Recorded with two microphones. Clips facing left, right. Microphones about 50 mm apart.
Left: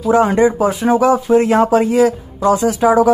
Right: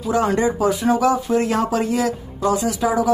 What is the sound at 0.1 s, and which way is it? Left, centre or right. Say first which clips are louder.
Speech: left 6 dB; left.